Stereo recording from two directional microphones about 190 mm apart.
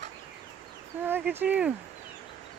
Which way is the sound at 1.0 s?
10° right (ahead or behind).